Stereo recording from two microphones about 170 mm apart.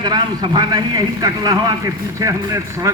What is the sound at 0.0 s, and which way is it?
A man's voice, 25° right (ahead or behind).